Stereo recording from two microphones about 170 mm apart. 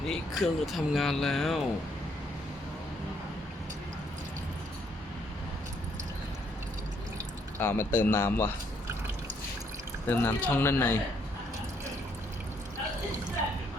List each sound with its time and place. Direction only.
0.1 s speech: centre (ahead or behind)
7.6 s a man's voice: 10° left (ahead or behind)
10.1 s a man's voice: 10° left (ahead or behind)